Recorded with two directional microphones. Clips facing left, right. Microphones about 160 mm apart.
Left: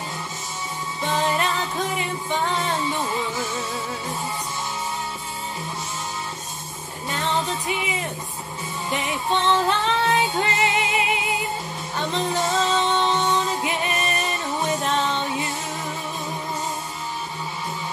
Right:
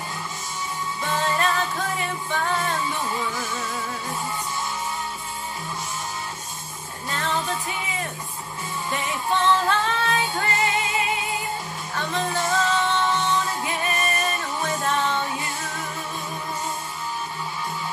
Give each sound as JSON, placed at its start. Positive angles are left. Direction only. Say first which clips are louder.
{"t": 1.0, "sound": "music", "louder": "left 1 dB", "side_deg": 20}
{"t": 7.1, "sound": "music", "louder": "left 2 dB", "side_deg": 20}
{"t": 8.9, "sound": "music", "louder": "left 1 dB", "side_deg": 20}